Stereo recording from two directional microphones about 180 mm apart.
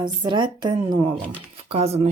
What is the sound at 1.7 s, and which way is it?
Speech, 35° right (ahead or behind).